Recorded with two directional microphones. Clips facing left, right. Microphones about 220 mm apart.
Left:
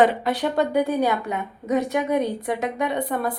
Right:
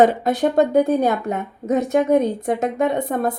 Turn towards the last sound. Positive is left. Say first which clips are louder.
# right 4 dB
turn(degrees=-45)  # may be behind; listen again after turning